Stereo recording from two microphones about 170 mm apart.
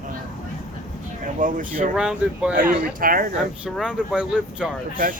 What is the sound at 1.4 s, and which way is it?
Speech, 50° right (ahead or behind).